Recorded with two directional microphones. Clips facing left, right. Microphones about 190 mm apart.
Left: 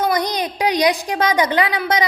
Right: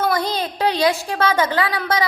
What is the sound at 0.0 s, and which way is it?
A woman's voice, 15° left (ahead or behind).